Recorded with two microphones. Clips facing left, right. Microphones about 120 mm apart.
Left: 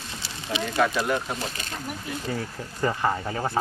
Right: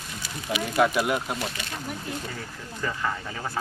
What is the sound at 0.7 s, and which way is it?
Speech, 10° right (ahead or behind).